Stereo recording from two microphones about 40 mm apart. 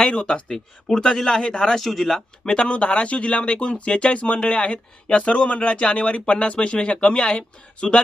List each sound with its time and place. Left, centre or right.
0.0 s speech: left
1.8 s speech: centre
2.4 s speech: left